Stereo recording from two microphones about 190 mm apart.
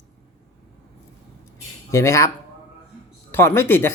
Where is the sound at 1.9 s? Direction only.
15° left (ahead or behind).